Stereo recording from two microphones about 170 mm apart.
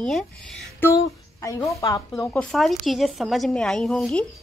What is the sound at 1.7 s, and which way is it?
Speech, 20° left (ahead or behind).